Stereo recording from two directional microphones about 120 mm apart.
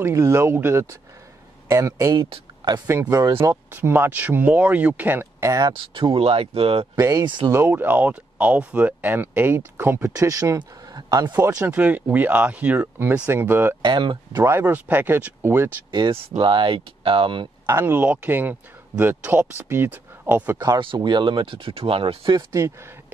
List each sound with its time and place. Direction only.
0.0 s speech: 25° right (ahead or behind)
5.7 s speech: 45° right (ahead or behind)
7.0 s speech: 30° right (ahead or behind)
7.2 s speech: 40° right (ahead or behind)
7.5 s speech: 15° right (ahead or behind)
10.1 s speech: 30° right (ahead or behind)
11.7 s speech: 10° right (ahead or behind)
13.8 s speech: 40° right (ahead or behind)
14.3 s speech: 20° right (ahead or behind)
15.9 s speech: 40° right (ahead or behind)
17.6 s speech: 20° right (ahead or behind)
20.5 s speech: 30° right (ahead or behind); by 22.4 s 45° right (ahead or behind)
22.5 s speech: 20° right (ahead or behind)